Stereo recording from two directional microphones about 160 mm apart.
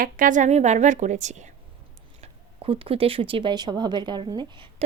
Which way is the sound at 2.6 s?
35° right (ahead or behind).